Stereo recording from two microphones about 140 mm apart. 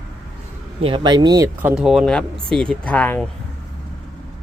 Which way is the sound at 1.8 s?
Centre (ahead or behind).